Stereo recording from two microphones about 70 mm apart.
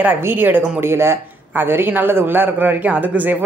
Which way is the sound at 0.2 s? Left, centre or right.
Right.